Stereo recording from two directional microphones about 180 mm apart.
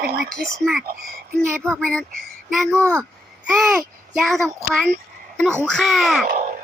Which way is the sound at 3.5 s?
Centre (ahead or behind).